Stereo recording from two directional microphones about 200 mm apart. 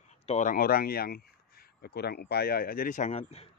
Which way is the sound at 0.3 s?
40° left (ahead or behind).